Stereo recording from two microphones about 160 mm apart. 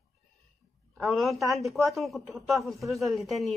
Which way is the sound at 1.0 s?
Centre (ahead or behind).